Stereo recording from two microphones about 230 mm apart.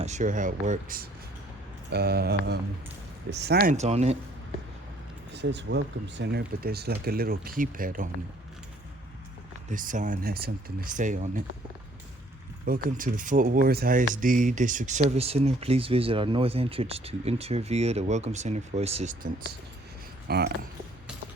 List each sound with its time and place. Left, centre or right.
0.0 s speech: right
5.3 s speech: right
9.6 s speech: right
12.6 s speech: right
20.2 s speech: right